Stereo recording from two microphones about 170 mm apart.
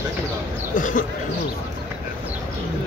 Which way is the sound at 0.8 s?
50° left (ahead or behind).